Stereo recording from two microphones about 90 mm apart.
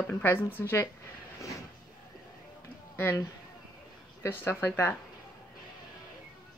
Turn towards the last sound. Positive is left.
turn(degrees=25)  # may be behind; listen again after turning